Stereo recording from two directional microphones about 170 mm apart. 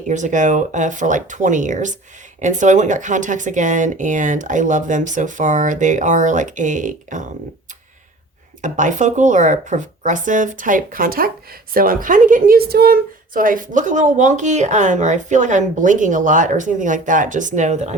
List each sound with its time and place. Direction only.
0.1 s a woman's voice: 45° right (ahead or behind)
8.6 s a woman's voice: 45° right (ahead or behind)